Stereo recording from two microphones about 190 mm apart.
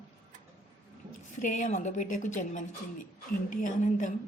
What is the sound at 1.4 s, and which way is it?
A woman's voice, 40° left (ahead or behind).